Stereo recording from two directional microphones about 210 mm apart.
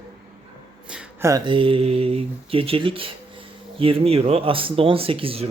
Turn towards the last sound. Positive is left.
turn(degrees=-25)  # may be behind; listen again after turning